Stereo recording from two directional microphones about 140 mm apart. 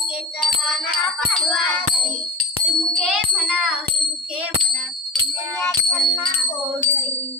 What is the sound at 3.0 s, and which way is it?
Music, centre (ahead or behind).